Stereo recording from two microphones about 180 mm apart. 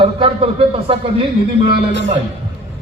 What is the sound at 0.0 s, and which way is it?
A man's voice, 30° right (ahead or behind).